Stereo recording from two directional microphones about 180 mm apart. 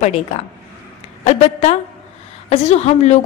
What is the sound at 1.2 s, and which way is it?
A woman's voice, 40° left (ahead or behind).